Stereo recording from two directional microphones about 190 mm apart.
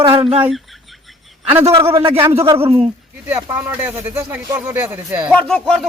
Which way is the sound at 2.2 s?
15° right (ahead or behind).